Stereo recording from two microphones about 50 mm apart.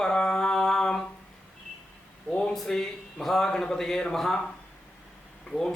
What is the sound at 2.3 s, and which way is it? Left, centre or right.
Speech, centre.